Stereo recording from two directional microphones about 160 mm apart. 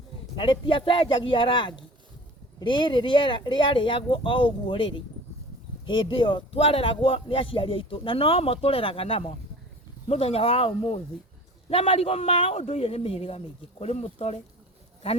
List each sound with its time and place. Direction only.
0.3 s speech: 30° left (ahead or behind)